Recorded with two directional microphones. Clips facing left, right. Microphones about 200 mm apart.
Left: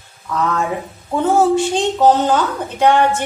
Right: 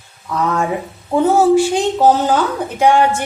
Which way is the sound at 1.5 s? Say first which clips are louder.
Right 3 dB; 10° right (ahead or behind).